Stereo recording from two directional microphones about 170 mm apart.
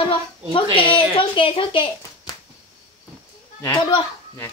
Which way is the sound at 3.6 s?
25° left (ahead or behind).